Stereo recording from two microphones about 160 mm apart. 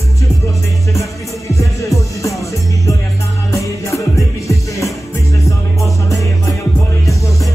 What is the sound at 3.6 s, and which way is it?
Music, 20° left (ahead or behind).